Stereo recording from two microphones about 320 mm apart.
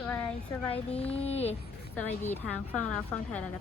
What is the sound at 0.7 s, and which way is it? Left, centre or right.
Speech, centre.